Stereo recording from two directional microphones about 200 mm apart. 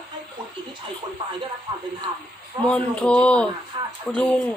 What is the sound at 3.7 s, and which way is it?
Speech, 25° right (ahead or behind).